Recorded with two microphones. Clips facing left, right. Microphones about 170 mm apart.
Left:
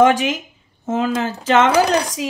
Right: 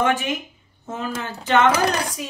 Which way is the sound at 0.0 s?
90° left.